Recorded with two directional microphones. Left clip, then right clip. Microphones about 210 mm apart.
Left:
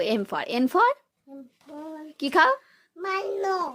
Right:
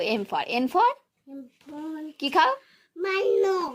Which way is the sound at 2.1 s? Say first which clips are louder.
Left 2 dB; 30° left (ahead or behind).